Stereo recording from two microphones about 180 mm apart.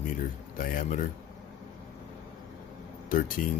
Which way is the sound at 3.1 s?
50° left (ahead or behind).